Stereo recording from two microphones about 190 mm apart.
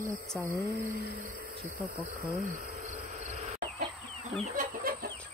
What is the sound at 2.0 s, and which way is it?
Cricket, 50° right (ahead or behind).